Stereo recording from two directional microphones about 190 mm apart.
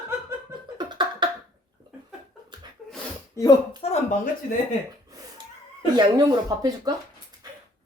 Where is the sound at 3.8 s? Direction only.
30° left (ahead or behind).